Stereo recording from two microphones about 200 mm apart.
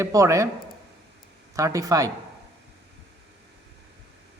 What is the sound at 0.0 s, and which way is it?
Speech, 15° right (ahead or behind).